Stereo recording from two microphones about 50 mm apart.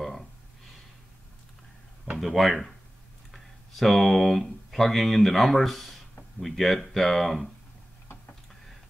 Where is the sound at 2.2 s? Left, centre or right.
Centre.